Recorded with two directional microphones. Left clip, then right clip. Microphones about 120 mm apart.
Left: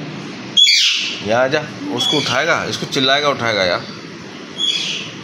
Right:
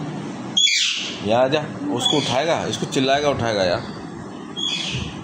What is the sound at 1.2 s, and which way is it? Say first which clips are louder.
Speech: left 1 dB; 5° left (ahead or behind).